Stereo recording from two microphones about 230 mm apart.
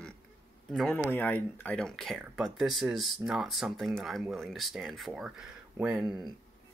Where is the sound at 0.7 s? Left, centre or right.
Centre.